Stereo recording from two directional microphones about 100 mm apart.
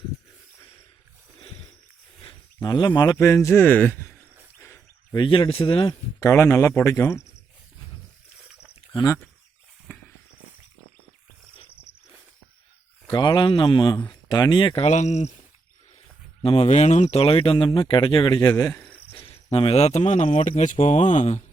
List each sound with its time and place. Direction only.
2.6 s speech: 45° left (ahead or behind)
3.2 s a man's voice: 30° left (ahead or behind)
5.1 s speech: 50° left (ahead or behind)
6.1 s a man's voice: 30° left (ahead or behind)
13.1 s speech: 50° left (ahead or behind)
14.1 s speech: 40° left (ahead or behind)
14.8 s speech: 90° left
16.4 s speech: 70° left (ahead or behind); by 18.3 s 55° left (ahead or behind)
18.3 s speech: 35° left (ahead or behind)
19.1 s speech: 65° left (ahead or behind); by 20.6 s 90° left